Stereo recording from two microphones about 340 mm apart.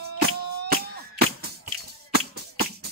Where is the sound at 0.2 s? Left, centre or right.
Right.